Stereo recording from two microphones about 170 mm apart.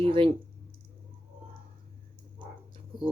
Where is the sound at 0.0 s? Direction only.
30° right (ahead or behind).